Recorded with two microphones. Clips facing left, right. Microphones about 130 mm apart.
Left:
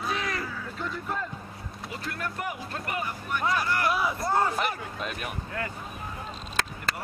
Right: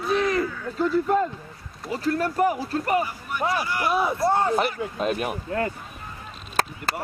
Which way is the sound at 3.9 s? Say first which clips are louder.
Right 5 dB; 25° right (ahead or behind).